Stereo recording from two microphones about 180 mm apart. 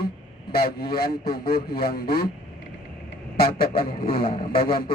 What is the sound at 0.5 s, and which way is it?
A man's voice, 60° left (ahead or behind).